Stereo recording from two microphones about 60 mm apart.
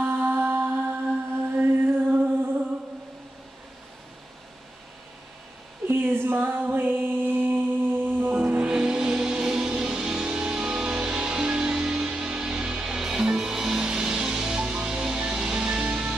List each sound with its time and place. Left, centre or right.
0.0 s mantra: right
1.5 s music: right
5.9 s music: right
8.4 s music: centre